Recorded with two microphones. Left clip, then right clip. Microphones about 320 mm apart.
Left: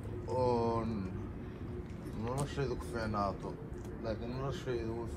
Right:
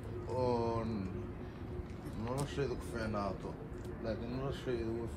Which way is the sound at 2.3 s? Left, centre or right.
Centre.